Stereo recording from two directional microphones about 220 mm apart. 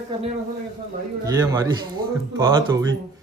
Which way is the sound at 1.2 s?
15° right (ahead or behind).